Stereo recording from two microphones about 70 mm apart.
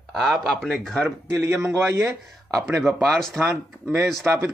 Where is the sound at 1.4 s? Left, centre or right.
Right.